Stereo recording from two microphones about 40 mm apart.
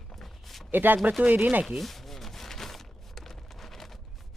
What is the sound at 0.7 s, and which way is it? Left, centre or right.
Speech, right.